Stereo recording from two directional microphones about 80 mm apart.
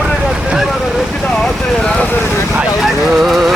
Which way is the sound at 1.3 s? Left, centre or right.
Centre.